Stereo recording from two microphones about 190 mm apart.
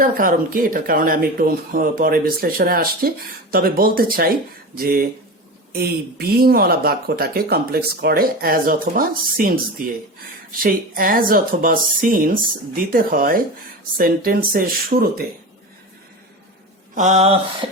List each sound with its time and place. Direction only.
0.0 s speech: 45° right (ahead or behind)
10.6 s speech: 50° right (ahead or behind)
16.9 s mantra: 40° right (ahead or behind)